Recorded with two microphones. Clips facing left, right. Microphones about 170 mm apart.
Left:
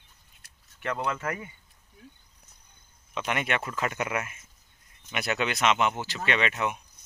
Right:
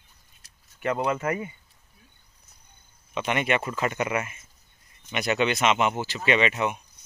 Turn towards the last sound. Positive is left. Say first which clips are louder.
# right 4 dB
turn(degrees=0)  # may be behind; listen again after turning